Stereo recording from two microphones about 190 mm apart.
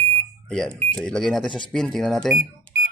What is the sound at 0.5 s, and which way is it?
Speech, 5° left (ahead or behind).